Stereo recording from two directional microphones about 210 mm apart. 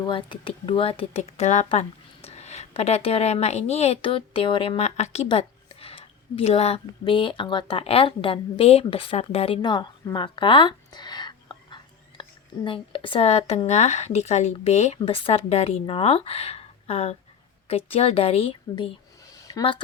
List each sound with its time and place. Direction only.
0.0 s speech: 25° left (ahead or behind)